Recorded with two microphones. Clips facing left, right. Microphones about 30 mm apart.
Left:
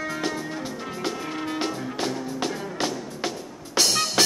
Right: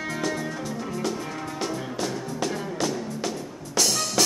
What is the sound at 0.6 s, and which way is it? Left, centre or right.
Music, left.